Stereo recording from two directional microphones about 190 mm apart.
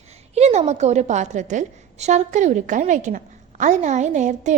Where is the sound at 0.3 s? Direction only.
35° right (ahead or behind).